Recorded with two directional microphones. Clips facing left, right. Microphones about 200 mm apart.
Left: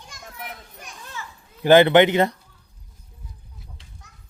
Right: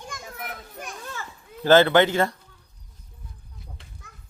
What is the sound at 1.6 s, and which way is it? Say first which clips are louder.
Speech: left 3 dB; 15° left (ahead or behind).